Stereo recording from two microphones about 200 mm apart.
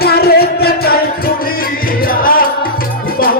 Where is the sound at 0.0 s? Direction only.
50° left (ahead or behind).